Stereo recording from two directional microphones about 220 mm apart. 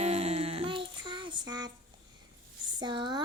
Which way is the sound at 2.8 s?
20° right (ahead or behind).